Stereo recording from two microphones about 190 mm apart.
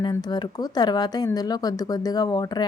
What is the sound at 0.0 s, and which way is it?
Speech, 20° left (ahead or behind).